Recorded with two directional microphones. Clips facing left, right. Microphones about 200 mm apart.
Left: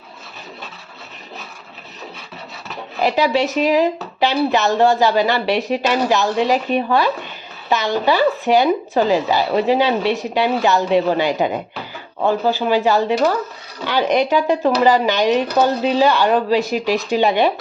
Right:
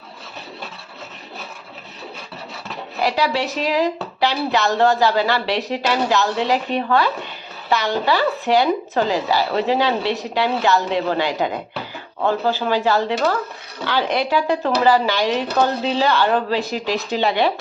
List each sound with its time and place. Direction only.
3.0 s speech: 20° left (ahead or behind)